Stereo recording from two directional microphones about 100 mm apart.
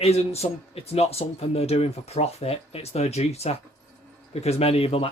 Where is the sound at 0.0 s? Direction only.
90° left.